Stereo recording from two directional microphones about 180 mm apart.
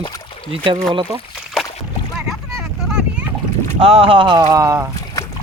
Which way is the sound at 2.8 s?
5° right (ahead or behind).